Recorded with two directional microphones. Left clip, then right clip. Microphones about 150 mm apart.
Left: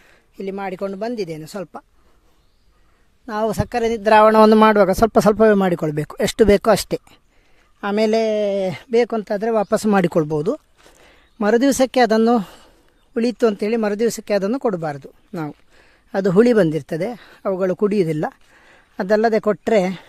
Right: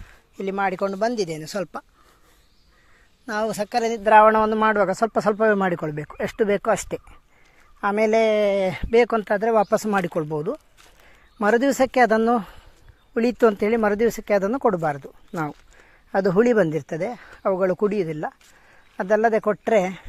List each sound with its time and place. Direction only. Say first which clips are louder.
0.3 s speech: right 3 dB; 25° left (ahead or behind)
3.4 s speech: left 3 dB; 55° left (ahead or behind)
7.8 s speech: left 1 dB; 55° left (ahead or behind)
9.7 s speech: left 5 dB; 60° left (ahead or behind); by 15.5 s 35° left (ahead or behind)
16.4 s speech: left 6 dB; 60° left (ahead or behind)
17.0 s speech: left 1 dB; 65° left (ahead or behind)
17.9 s a sound: left 6 dB; 85° left; by 19.0 s 65° left (ahead or behind)
19.3 s speech: left 3 dB; 55° left (ahead or behind)